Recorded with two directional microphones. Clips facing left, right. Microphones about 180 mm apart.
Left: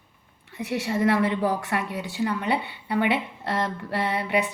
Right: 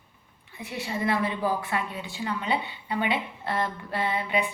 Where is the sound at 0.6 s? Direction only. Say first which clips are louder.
Left 6 dB; 75° left (ahead or behind).